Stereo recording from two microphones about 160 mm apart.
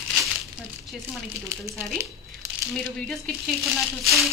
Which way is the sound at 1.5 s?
15° right (ahead or behind).